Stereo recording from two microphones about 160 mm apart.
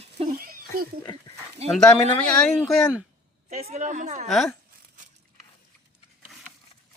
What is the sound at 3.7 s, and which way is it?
Speech, 50° right (ahead or behind).